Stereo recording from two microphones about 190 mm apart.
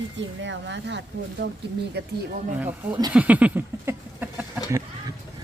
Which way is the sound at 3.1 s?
5° right (ahead or behind).